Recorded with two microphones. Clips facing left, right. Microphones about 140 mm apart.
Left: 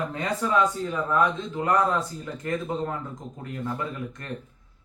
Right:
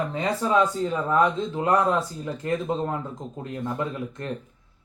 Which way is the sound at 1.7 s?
20° right (ahead or behind).